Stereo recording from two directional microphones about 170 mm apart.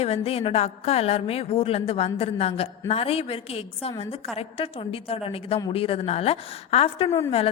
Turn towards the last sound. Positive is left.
turn(degrees=35)  # may be behind; listen again after turning